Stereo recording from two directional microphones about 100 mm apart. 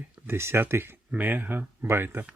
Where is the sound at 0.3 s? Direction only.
25° right (ahead or behind).